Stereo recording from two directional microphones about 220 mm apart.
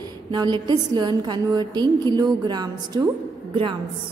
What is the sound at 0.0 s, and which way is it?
A woman's voice, 20° right (ahead or behind).